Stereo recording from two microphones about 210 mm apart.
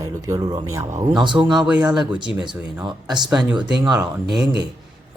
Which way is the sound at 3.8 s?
20° right (ahead or behind).